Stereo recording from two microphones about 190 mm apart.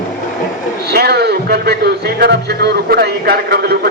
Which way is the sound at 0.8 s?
55° right (ahead or behind).